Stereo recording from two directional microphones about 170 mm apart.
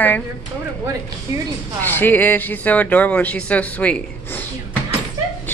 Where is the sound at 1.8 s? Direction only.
10° left (ahead or behind).